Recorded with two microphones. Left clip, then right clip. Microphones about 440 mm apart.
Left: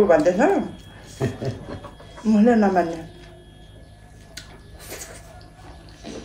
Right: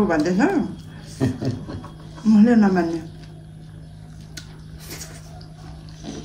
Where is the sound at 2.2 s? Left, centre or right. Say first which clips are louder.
Even; centre.